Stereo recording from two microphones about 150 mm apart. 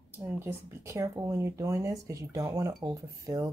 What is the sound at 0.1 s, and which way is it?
Speech, 15° right (ahead or behind).